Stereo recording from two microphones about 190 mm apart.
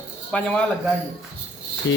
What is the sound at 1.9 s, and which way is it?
Speech, 75° left (ahead or behind).